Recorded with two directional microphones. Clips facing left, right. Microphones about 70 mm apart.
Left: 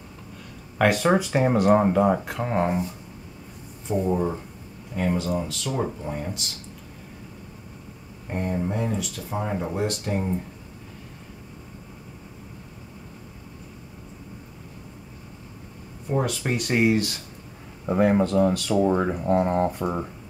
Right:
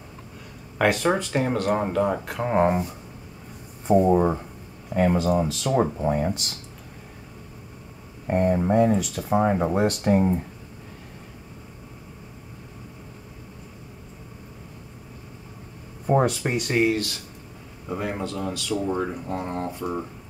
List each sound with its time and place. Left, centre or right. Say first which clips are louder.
0.7 s speech: left 1 dB; centre
2.3 s speech: right 3 dB; centre
3.8 s speech: right 6 dB; right
8.3 s speech: right 7 dB; right
9.8 s speech: right 5 dB; right
16.1 s a sound: right 5 dB; right
16.4 s speech: even; centre
17.8 s speech: left 9 dB; left